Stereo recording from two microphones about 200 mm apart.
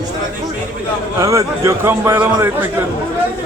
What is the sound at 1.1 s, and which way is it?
A man's voice, 15° right (ahead or behind).